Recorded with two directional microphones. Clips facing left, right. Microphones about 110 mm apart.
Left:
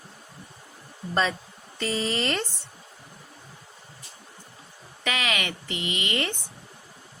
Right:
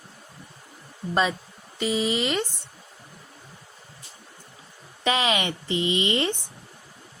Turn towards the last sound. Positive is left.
turn(degrees=-25)  # may be behind; listen again after turning